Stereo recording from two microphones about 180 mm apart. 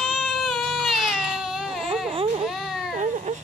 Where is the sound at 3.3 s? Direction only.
40° right (ahead or behind).